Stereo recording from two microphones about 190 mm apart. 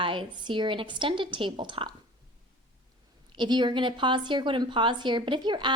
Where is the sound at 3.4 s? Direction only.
25° right (ahead or behind).